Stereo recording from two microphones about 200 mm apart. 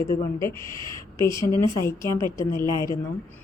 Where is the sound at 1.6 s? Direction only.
15° left (ahead or behind).